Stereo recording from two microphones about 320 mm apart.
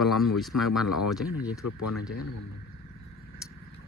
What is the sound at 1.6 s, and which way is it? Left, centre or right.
Speech, left.